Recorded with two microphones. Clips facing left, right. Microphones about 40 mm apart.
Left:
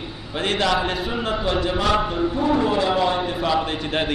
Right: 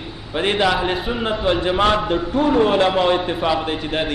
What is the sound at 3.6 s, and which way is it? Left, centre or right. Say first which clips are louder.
Speech: right 1 dB; centre.